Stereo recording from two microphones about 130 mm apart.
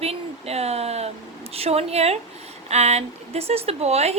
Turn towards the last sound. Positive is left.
turn(degrees=-55)  # may be behind; listen again after turning